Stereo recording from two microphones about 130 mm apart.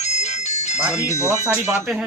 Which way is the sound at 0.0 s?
60° left (ahead or behind).